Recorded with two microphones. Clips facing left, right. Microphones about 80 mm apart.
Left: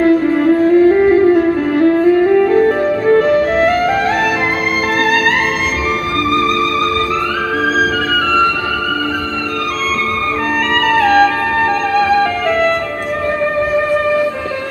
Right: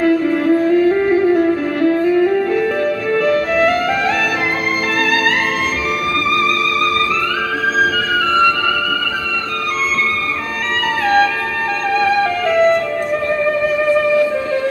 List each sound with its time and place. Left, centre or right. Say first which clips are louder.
0.0 s music: left 3 dB; left
11.0 s music: left 3 dB; left